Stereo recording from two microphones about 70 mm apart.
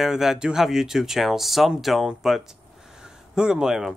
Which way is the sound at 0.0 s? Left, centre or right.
Centre.